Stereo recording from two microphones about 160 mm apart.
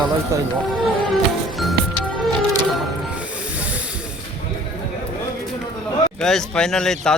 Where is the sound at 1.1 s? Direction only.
Centre (ahead or behind).